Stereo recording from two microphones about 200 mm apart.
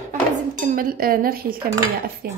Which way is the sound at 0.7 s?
45° right (ahead or behind).